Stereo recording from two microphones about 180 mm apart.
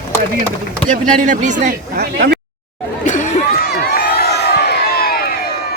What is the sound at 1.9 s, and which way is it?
Speech, 65° right (ahead or behind).